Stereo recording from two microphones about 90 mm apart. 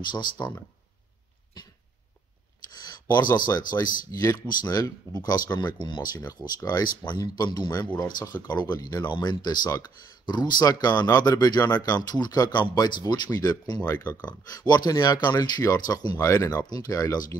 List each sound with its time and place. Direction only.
0.1 s speech: 55° left (ahead or behind)
2.8 s speech: 50° left (ahead or behind)
13.8 s speech: 20° left (ahead or behind)
14.2 s speech: 45° left (ahead or behind)
16.2 s speech: 35° left (ahead or behind)